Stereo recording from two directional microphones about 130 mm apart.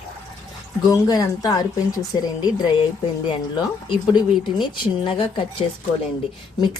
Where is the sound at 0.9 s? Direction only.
30° left (ahead or behind).